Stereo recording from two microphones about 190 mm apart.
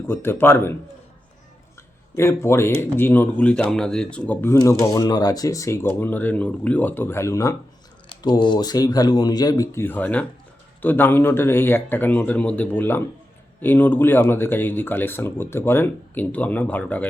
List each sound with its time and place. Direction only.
0.1 s speech: 10° left (ahead or behind)
2.1 s speech: 15° left (ahead or behind)